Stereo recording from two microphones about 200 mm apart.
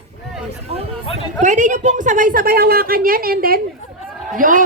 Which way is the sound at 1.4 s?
40° right (ahead or behind).